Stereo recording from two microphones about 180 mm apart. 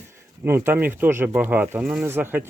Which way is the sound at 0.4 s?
10° right (ahead or behind).